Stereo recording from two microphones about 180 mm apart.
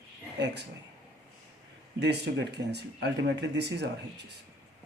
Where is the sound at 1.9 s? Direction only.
70° right (ahead or behind).